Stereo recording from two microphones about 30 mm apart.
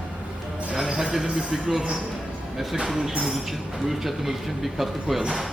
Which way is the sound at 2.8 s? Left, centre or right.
Centre.